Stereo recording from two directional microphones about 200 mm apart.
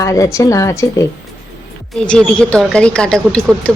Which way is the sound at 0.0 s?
15° left (ahead or behind).